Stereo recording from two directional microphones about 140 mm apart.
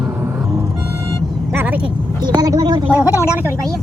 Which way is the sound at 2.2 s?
30° right (ahead or behind).